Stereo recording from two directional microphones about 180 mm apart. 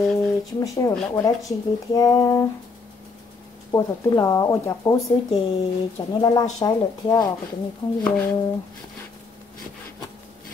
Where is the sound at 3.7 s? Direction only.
20° left (ahead or behind).